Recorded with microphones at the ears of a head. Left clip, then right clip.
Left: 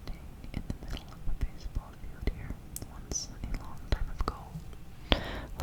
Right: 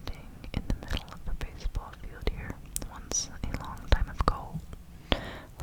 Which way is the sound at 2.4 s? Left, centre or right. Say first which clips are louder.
Right 6 dB; right.